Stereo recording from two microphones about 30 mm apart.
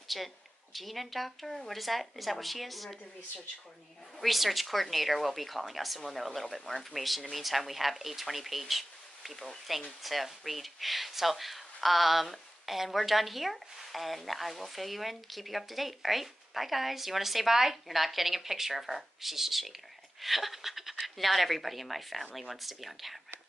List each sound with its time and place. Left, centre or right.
0.1 s speech: centre
4.2 s speech: centre